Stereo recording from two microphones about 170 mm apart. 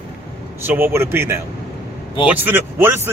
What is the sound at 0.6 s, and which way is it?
Speech, 10° right (ahead or behind).